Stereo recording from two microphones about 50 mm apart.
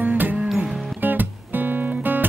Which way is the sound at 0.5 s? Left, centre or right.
Right.